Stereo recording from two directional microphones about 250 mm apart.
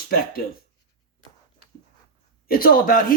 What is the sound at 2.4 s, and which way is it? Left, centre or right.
Speech, left.